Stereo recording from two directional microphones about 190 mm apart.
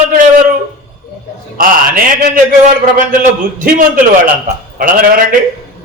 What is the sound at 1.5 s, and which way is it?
Speech, 45° right (ahead or behind).